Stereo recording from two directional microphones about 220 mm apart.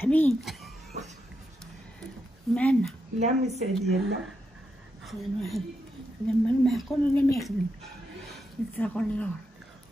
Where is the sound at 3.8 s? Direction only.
Centre (ahead or behind).